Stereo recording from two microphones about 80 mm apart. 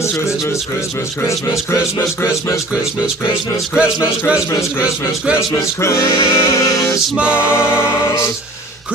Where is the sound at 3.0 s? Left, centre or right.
Centre.